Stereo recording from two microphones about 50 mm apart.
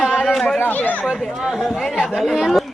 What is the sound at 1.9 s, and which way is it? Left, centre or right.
Speech, centre.